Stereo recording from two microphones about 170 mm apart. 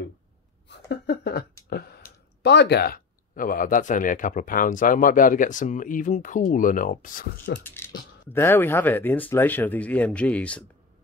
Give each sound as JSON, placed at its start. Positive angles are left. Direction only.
{"t": 0.7, "sound": "speech", "side_deg": 85}
{"t": 7.6, "sound": "speech", "side_deg": 15}